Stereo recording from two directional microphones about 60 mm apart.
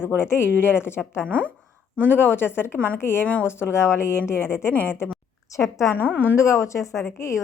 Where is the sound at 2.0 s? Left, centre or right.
Left.